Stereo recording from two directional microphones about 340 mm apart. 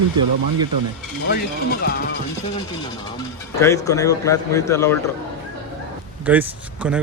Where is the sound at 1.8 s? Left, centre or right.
Left.